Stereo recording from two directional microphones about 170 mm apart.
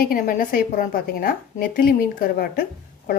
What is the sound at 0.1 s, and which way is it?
A woman's voice, 55° left (ahead or behind).